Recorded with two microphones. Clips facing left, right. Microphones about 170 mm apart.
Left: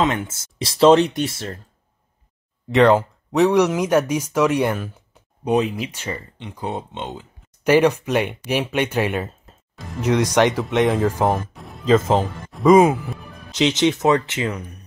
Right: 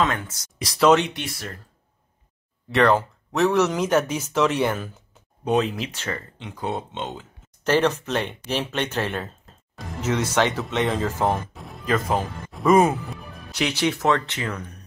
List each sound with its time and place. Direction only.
0.0 s speech: 20° left (ahead or behind)
2.7 s speech: 15° left (ahead or behind)
11.5 s music: centre (ahead or behind)
11.8 s speech: 25° left (ahead or behind)
12.7 s speech: 10° left (ahead or behind)
13.5 s speech: 20° left (ahead or behind)